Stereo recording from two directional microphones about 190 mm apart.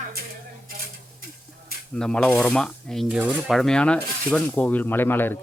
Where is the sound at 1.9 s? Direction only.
5° left (ahead or behind).